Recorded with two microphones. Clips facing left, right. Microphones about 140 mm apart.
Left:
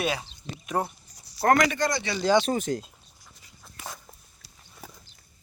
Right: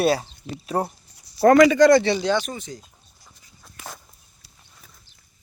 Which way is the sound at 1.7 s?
90° right.